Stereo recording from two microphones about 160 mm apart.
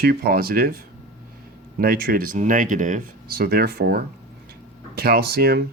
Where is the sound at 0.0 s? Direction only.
75° right (ahead or behind).